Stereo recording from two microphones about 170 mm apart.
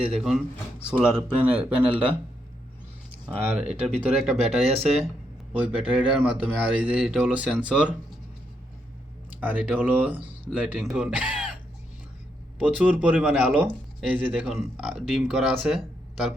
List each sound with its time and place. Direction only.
0.1 s speech: centre (ahead or behind)
3.7 s speech: 5° right (ahead or behind)
9.4 s speech: 10° right (ahead or behind)
12.6 s speech: 5° right (ahead or behind)